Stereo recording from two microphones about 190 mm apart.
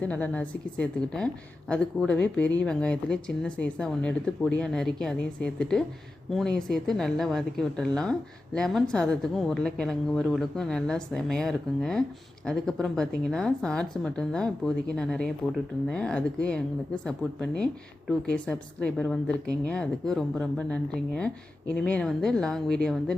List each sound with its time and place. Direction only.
0.0 s a woman's voice: 10° left (ahead or behind)